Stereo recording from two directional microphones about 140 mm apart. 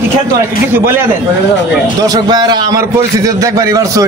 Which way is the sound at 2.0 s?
30° right (ahead or behind).